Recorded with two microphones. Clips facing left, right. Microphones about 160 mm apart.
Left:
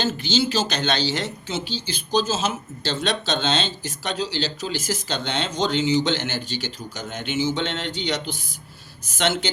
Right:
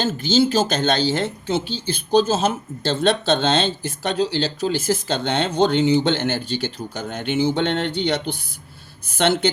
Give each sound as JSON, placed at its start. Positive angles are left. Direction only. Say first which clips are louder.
{"t": 0.0, "sound": "speech", "louder": "right 5 dB", "side_deg": -50}